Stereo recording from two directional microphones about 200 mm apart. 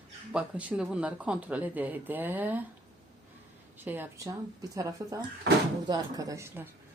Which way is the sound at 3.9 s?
10° right (ahead or behind).